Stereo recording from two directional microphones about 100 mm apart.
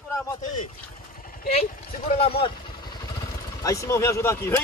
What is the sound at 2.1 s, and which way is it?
Speech, 75° left (ahead or behind).